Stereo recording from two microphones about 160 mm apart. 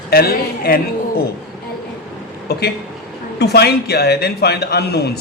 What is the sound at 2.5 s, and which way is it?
A man's voice, 80° left.